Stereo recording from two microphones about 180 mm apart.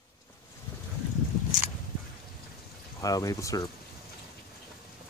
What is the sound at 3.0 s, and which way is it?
Speech, 20° left (ahead or behind).